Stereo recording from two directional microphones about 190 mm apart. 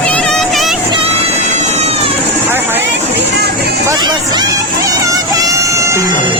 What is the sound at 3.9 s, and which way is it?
Speech, 20° right (ahead or behind).